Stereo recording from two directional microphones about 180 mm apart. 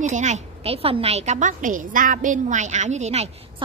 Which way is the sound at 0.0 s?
40° right (ahead or behind).